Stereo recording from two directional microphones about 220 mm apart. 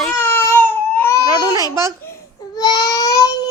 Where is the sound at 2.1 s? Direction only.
15° left (ahead or behind).